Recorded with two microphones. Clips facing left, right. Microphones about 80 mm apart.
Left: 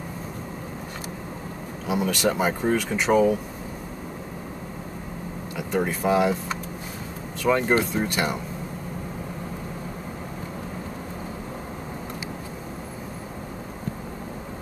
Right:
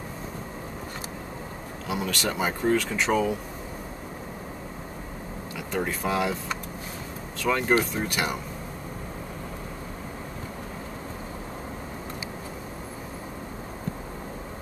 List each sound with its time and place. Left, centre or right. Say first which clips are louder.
1.9 s speech: left 5 dB; centre
2.2 s speech: left 2 dB; centre
5.7 s speech: left 5 dB; centre
7.4 s speech: left 4 dB; centre
7.9 s speech: left 3 dB; centre